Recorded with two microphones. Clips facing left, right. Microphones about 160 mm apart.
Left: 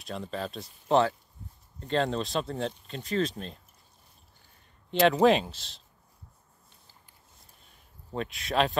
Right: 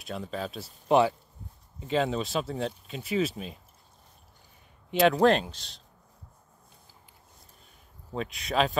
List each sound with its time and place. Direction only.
0.0 s speech: centre (ahead or behind)
4.9 s speech: centre (ahead or behind)
8.1 s speech: centre (ahead or behind)